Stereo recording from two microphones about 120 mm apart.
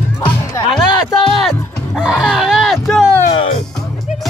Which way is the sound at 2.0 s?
5° right (ahead or behind).